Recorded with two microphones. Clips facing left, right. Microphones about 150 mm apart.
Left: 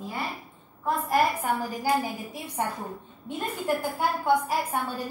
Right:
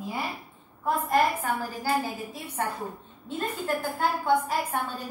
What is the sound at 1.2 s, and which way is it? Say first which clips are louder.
A woman's voice: left 1 dB; 10° left (ahead or behind).